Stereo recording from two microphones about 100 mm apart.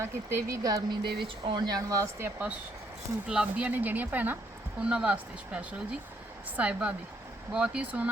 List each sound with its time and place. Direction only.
0.0 s speech: 25° right (ahead or behind)
3.2 s speech: 10° right (ahead or behind)